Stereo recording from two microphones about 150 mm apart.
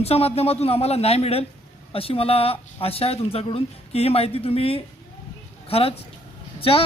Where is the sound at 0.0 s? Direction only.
40° left (ahead or behind).